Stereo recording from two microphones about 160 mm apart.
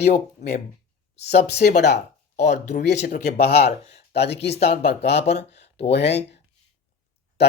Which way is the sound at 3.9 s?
90° left.